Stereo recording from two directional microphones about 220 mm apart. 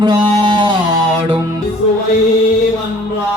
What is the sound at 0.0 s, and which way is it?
Music, 20° right (ahead or behind).